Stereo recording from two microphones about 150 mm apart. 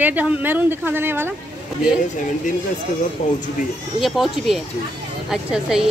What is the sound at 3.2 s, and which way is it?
Speech, 50° left (ahead or behind).